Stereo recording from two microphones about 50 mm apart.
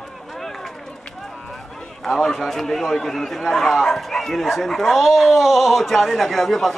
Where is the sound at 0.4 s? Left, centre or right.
Centre.